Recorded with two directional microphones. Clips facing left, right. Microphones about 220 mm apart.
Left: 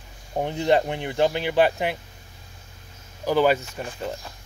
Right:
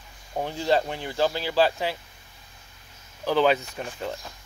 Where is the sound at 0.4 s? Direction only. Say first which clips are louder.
Left 3 dB; 20° left (ahead or behind).